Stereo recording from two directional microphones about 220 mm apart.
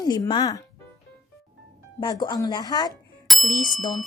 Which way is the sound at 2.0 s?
20° left (ahead or behind).